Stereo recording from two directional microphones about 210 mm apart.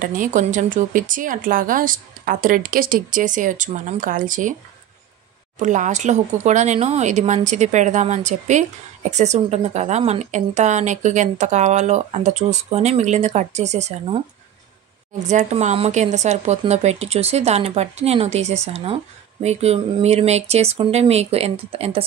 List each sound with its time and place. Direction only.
0.0 s speech: 40° right (ahead or behind)
5.6 s speech: 35° right (ahead or behind)
15.2 s speech: 35° right (ahead or behind)